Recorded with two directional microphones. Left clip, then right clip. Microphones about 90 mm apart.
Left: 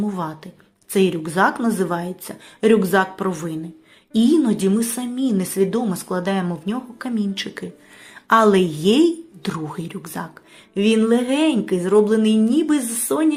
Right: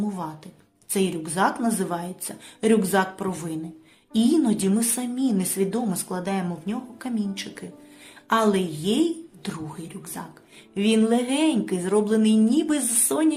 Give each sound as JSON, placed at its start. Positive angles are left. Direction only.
{"t": 0.1, "sound": "a woman's voice", "side_deg": 50}
{"t": 6.7, "sound": "a woman's voice", "side_deg": 55}
{"t": 8.3, "sound": "a woman's voice", "side_deg": 65}
{"t": 9.4, "sound": "speech", "side_deg": 55}
{"t": 10.8, "sound": "speech", "side_deg": 25}